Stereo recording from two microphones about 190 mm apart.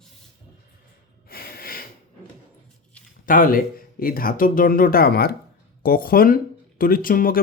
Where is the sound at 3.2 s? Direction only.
45° left (ahead or behind).